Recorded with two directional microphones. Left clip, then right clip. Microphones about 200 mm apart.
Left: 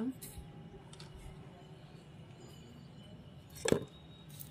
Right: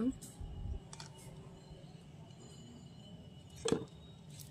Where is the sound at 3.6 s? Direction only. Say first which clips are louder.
Left 3 dB; 25° left (ahead or behind).